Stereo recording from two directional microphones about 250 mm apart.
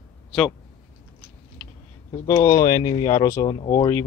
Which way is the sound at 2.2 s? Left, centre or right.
Centre.